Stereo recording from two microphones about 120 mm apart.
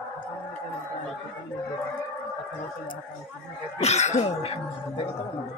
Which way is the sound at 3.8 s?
70° left (ahead or behind).